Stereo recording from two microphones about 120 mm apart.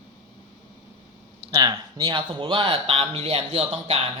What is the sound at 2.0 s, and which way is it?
Speech, 45° right (ahead or behind).